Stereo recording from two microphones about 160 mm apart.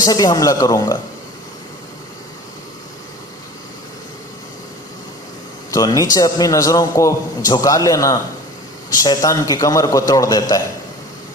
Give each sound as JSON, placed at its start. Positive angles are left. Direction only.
{"t": 0.0, "sound": "a man's voice", "side_deg": 25}
{"t": 5.7, "sound": "a man's voice", "side_deg": 20}